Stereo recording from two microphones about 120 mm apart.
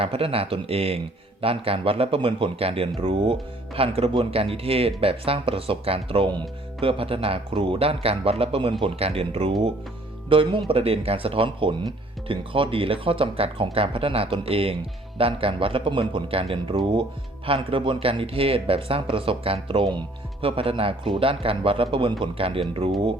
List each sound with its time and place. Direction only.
0.0 s a man's voice: 55° right (ahead or behind)